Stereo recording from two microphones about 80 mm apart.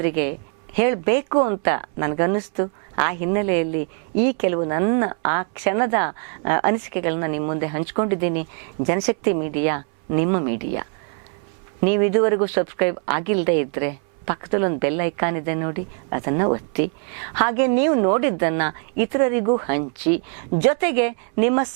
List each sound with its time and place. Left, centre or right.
0.0 s speech: centre